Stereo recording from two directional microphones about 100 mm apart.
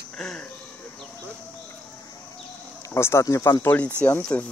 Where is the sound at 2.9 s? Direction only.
25° left (ahead or behind).